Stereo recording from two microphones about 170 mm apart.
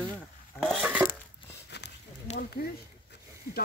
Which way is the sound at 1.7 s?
75° left (ahead or behind).